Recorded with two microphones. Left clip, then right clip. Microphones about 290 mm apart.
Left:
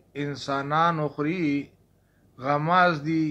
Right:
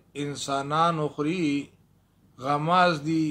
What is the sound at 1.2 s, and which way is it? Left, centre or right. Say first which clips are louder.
Speech: even; right.